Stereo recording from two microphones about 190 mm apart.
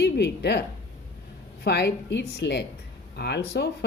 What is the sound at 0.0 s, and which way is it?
Speech, 60° left (ahead or behind).